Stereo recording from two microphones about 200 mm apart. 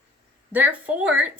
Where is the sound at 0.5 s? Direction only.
10° right (ahead or behind).